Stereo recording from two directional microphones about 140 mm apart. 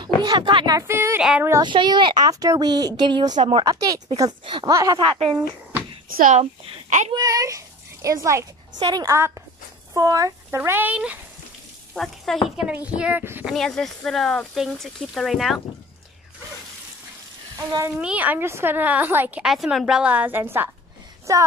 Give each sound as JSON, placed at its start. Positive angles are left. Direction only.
{"t": 0.2, "sound": "speech", "side_deg": -30}
{"t": 0.7, "sound": "a sound", "side_deg": -20}
{"t": 1.6, "sound": "speech", "side_deg": -35}
{"t": 5.0, "sound": "speech", "side_deg": -40}
{"t": 6.0, "sound": "speech", "side_deg": -90}
{"t": 7.1, "sound": "a child's voice", "side_deg": -25}
{"t": 11.9, "sound": "speech", "side_deg": 0}
{"t": 12.5, "sound": "a woman's voice", "side_deg": -10}
{"t": 13.5, "sound": "speech", "side_deg": 5}
{"t": 17.6, "sound": "speech", "side_deg": -25}
{"t": 17.9, "sound": "a woman's voice", "side_deg": -10}